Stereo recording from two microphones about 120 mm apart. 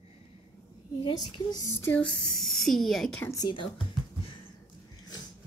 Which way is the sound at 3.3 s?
40° left (ahead or behind).